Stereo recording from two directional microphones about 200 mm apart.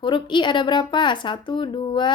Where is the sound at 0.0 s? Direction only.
25° left (ahead or behind).